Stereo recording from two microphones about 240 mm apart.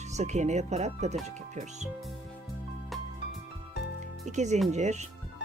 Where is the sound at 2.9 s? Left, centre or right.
Centre.